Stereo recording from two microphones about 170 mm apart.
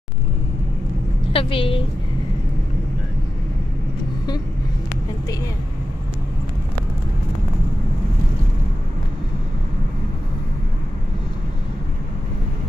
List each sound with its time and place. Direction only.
1.3 s a woman's voice: 30° left (ahead or behind)